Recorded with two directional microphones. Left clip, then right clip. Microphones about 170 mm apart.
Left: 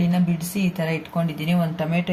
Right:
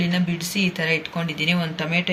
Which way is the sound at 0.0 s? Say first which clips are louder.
Right 1 dB; 50° left (ahead or behind).